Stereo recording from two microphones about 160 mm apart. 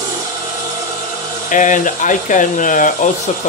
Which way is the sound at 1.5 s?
55° left (ahead or behind).